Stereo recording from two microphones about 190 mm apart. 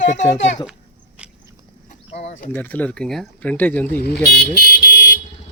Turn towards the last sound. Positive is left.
turn(degrees=55)  # may be behind; listen again after turning